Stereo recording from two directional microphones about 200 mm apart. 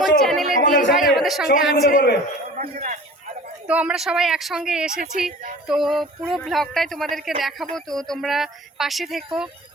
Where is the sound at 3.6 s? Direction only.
5° right (ahead or behind).